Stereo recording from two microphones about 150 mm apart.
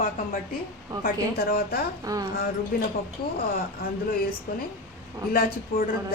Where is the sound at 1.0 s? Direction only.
75° left (ahead or behind).